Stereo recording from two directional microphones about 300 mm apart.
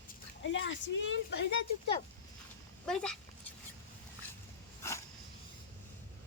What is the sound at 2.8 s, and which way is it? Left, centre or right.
Speech, centre.